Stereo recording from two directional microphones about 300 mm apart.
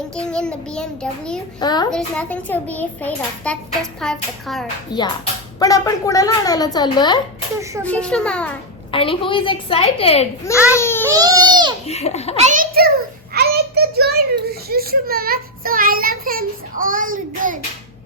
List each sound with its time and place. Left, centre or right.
0.2 s a child's voice: centre
1.5 s a woman's voice: centre
1.9 s a child's voice: centre
4.9 s a woman's voice: centre
7.9 s a child's voice: centre
8.9 s a woman's voice: centre
10.7 s baby cry: centre
11.1 s baby cry: centre
11.9 s a child's voice: left
12.4 s a child's voice: right
13.3 s child singing: right
14.7 s a child's voice: right